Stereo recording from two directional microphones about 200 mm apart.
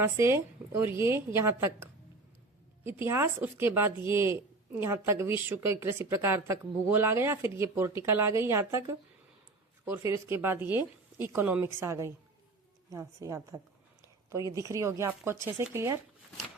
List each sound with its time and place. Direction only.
0.0 s a woman's voice: 10° right (ahead or behind)
3.1 s a woman's voice: 10° right (ahead or behind)